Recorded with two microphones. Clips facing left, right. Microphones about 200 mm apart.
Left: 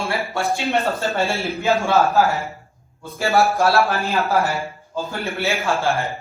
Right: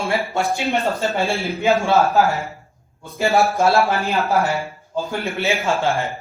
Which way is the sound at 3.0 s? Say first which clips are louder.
Right 1 dB; 15° right (ahead or behind).